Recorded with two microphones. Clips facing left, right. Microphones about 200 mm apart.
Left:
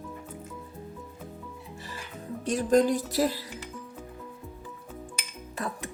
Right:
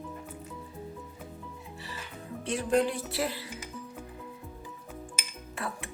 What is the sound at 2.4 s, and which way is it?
Speech, 40° left (ahead or behind).